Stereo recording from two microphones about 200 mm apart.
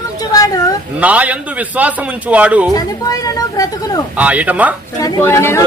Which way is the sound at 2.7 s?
20° left (ahead or behind).